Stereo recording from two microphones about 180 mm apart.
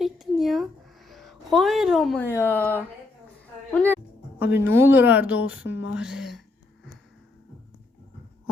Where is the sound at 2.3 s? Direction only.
10° left (ahead or behind).